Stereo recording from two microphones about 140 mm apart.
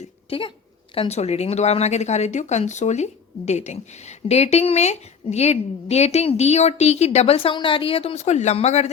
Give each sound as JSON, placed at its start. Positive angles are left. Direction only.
{"t": 0.3, "sound": "speech", "side_deg": 40}
{"t": 0.9, "sound": "speech", "side_deg": 50}